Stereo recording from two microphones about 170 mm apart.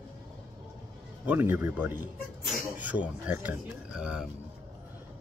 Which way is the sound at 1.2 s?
10° right (ahead or behind).